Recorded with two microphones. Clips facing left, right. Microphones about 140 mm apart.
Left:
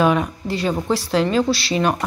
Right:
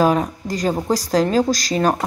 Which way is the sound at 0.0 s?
35° right (ahead or behind).